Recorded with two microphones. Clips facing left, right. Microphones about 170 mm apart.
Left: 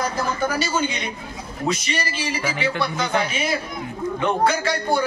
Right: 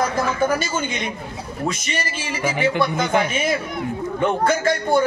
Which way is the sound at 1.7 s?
50° right (ahead or behind).